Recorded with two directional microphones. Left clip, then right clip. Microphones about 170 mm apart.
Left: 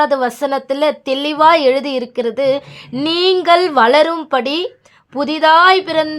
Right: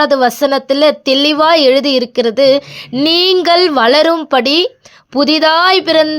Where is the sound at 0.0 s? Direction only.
25° right (ahead or behind).